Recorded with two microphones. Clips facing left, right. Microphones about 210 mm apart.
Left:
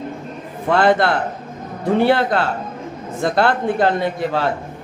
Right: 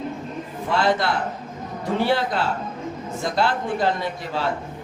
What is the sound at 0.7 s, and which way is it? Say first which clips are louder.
A man's voice: left 6 dB; 55° left (ahead or behind).